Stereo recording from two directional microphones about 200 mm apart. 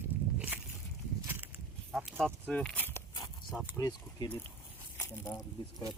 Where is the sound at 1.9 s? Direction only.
Centre (ahead or behind).